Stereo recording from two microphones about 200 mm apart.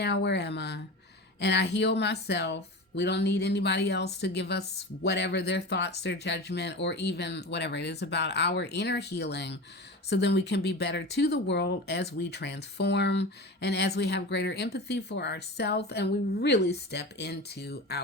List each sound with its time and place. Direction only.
0.0 s speech: 60° left (ahead or behind)